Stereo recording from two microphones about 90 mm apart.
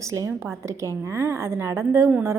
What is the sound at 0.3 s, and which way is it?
A woman's voice, 30° right (ahead or behind).